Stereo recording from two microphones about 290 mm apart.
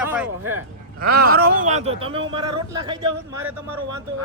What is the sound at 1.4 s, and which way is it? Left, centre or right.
Speech, right.